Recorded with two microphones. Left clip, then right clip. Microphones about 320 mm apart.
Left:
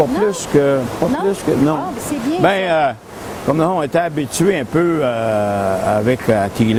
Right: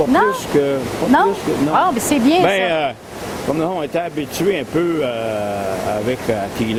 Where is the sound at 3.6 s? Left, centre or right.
Left.